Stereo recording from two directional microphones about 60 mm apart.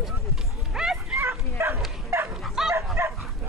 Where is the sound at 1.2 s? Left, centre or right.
Right.